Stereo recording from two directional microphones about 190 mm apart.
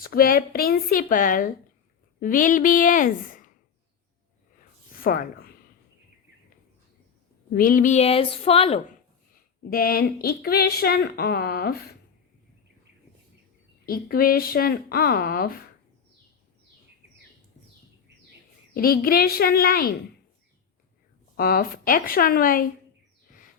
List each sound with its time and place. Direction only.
0.0 s speech: 50° left (ahead or behind)
5.0 s speech: 50° left (ahead or behind)
7.5 s a woman's voice: 45° left (ahead or behind)
9.3 s speech: 50° left (ahead or behind)
13.8 s speech: 50° left (ahead or behind)
18.7 s speech: 50° left (ahead or behind)
21.3 s speech: 50° left (ahead or behind)